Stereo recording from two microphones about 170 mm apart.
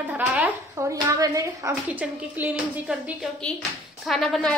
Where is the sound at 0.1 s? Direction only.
10° right (ahead or behind).